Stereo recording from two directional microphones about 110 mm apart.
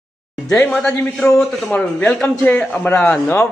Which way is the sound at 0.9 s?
5° left (ahead or behind).